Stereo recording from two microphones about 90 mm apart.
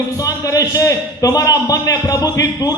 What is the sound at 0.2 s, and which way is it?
A man's voice, 40° left (ahead or behind).